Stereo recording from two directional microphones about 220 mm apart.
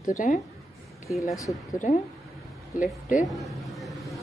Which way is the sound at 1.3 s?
15° left (ahead or behind).